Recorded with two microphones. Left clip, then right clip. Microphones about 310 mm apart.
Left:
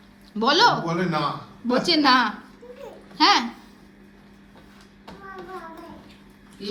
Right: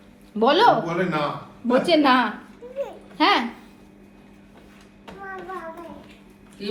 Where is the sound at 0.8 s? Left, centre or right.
Left.